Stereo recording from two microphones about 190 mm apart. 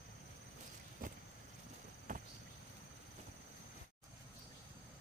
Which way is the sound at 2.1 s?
40° right (ahead or behind).